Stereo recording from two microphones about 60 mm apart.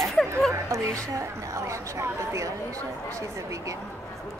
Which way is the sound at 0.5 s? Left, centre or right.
Right.